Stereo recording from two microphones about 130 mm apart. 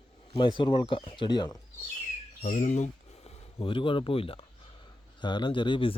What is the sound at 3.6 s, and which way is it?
Speech, 40° left (ahead or behind).